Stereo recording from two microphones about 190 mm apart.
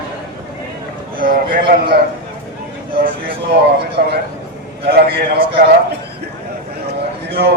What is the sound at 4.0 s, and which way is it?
A man's voice, 55° right (ahead or behind).